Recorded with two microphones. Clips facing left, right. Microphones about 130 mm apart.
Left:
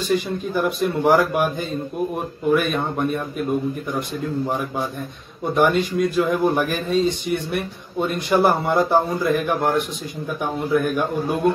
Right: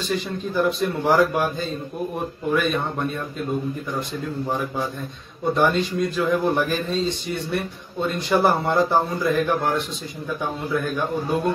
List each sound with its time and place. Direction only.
0.6 s a man's voice: 10° left (ahead or behind)
5.5 s a man's voice: 15° left (ahead or behind)